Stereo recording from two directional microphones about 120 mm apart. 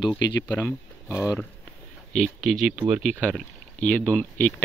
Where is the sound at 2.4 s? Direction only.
Centre (ahead or behind).